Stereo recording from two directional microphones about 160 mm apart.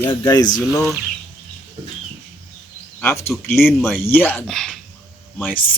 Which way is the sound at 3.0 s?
15° left (ahead or behind).